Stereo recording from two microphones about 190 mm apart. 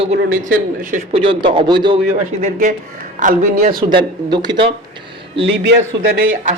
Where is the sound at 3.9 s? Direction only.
20° right (ahead or behind).